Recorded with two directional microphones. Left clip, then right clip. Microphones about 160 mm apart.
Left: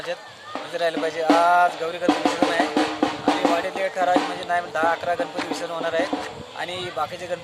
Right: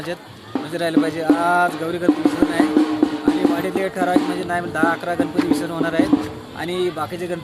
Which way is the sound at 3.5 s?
Centre (ahead or behind).